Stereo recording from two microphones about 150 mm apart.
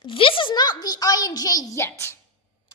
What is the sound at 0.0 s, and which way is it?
A child's voice, 35° left (ahead or behind).